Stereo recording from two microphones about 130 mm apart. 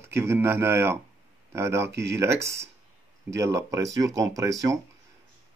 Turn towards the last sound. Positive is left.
turn(degrees=-25)  # may be behind; listen again after turning